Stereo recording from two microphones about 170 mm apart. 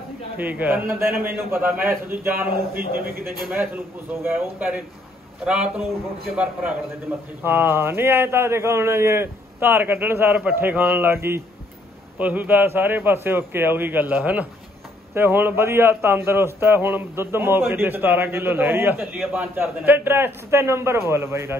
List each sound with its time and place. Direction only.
0.4 s a man's voice: 10° right (ahead or behind)
2.8 s a man's voice: 60° right (ahead or behind)
3.4 s a man's voice: 10° right (ahead or behind)